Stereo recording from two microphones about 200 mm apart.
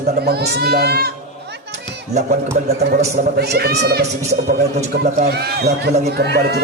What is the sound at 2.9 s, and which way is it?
Speech, 50° right (ahead or behind).